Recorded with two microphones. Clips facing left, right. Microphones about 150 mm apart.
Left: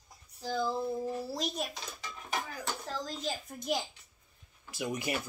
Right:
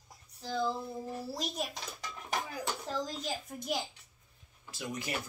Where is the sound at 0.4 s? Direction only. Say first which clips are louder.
Left 1 dB; 5° left (ahead or behind).